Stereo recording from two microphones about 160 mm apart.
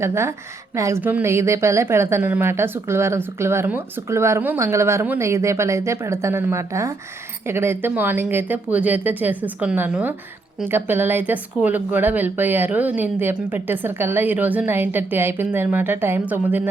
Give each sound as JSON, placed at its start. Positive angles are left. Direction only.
{"t": 0.0, "sound": "a woman's voice", "side_deg": -15}